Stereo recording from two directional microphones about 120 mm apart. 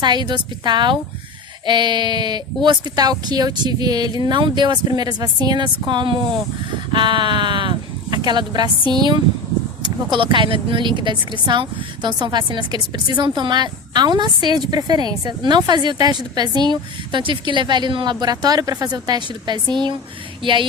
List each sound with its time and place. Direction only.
0.0 s speech: 40° right (ahead or behind)